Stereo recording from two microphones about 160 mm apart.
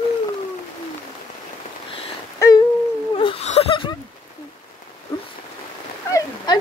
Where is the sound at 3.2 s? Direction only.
35° left (ahead or behind).